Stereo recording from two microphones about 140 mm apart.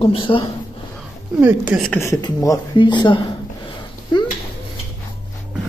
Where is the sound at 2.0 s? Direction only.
25° left (ahead or behind).